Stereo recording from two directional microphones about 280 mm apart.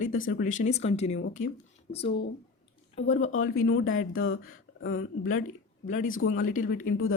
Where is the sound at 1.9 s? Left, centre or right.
Left.